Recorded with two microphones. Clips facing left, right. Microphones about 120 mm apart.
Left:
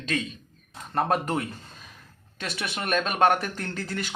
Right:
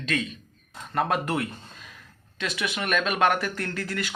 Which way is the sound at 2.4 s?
35° left (ahead or behind).